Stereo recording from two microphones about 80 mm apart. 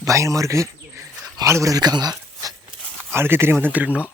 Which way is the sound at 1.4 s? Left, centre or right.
Right.